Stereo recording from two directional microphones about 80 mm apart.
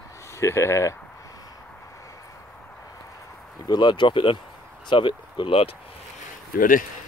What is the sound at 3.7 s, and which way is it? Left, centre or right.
Speech, left.